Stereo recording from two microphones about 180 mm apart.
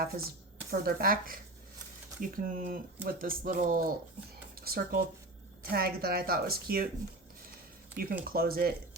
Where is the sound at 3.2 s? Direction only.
50° right (ahead or behind).